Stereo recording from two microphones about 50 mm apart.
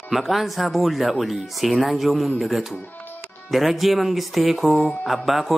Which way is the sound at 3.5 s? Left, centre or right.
Centre.